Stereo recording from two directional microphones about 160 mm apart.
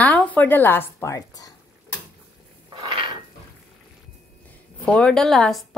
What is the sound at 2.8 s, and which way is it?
Dishes, 30° right (ahead or behind).